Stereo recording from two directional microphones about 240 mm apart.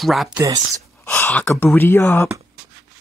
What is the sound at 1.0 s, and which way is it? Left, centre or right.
Speech, centre.